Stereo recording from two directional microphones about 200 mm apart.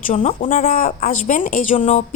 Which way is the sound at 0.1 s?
35° left (ahead or behind).